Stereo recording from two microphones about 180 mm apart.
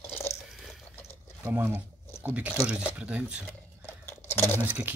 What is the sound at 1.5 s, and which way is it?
Speech, 10° right (ahead or behind).